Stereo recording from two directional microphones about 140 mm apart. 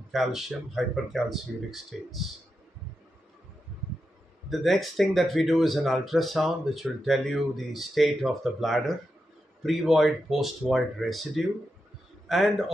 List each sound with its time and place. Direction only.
0.1 s speech: centre (ahead or behind)
4.5 s speech: centre (ahead or behind)